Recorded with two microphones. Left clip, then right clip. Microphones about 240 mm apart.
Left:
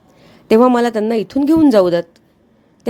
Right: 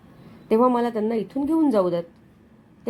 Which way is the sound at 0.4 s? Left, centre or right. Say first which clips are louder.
Left 8 dB; left.